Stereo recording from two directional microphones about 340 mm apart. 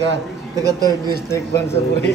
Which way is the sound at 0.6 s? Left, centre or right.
Centre.